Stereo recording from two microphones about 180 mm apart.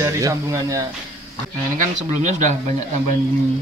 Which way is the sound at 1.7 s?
40° right (ahead or behind).